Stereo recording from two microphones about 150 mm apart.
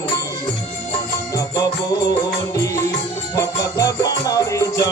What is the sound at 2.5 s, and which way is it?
Music, 20° left (ahead or behind).